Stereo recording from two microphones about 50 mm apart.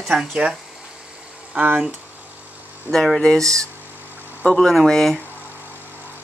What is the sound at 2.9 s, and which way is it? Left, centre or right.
Speech, centre.